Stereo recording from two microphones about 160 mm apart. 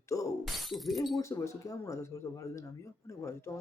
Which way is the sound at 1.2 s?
20° left (ahead or behind).